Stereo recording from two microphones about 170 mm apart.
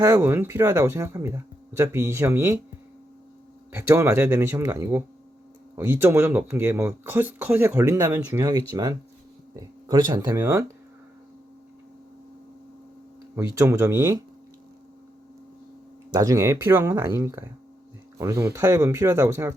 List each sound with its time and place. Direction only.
0.0 s speech: 15° right (ahead or behind)
3.7 s speech: 15° right (ahead or behind)
13.3 s speech: 15° right (ahead or behind)
16.1 s speech: 20° right (ahead or behind)